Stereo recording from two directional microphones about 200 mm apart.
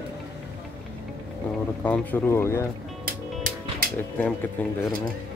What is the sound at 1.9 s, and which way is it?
Speech, 10° left (ahead or behind).